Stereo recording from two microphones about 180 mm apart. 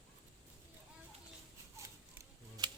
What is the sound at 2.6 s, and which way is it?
Typewriter, 25° right (ahead or behind).